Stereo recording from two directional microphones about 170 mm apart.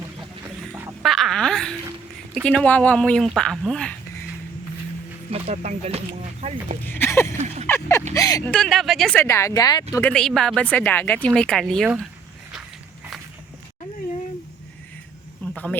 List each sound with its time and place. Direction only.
0.7 s a sound: 15° right (ahead or behind)
1.0 s wail: centre (ahead or behind)
2.3 s a woman's voice: 5° left (ahead or behind)
5.3 s speech: 40° right (ahead or behind)
6.8 s speech: 15° left (ahead or behind)
7.3 s speech: 40° right (ahead or behind)
7.7 s speech: 15° left (ahead or behind)
8.4 s a woman's voice: 5° left (ahead or behind)
9.2 s speech: 15° left (ahead or behind)
10.1 s a woman's voice: 5° left (ahead or behind)
15.5 s speech: 10° left (ahead or behind)